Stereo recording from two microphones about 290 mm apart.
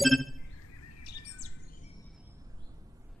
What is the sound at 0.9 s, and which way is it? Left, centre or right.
Chirp, left.